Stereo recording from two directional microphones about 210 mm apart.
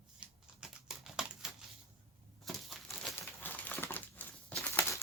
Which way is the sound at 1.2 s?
5° right (ahead or behind).